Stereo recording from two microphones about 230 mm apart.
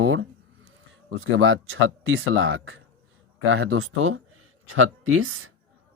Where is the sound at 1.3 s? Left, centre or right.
Right.